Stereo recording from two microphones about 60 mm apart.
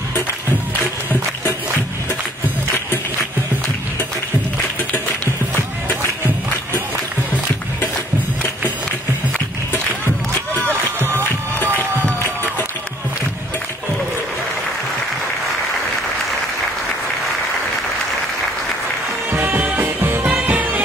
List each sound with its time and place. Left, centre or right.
2.7 s music: left
19.3 s music: right
20.2 s music: right